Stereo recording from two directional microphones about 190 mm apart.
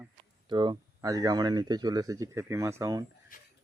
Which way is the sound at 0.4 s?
25° right (ahead or behind).